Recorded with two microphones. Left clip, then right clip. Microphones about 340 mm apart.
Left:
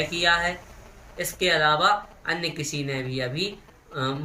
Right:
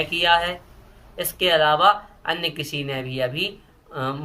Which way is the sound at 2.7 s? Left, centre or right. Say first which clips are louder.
Right 3 dB; right.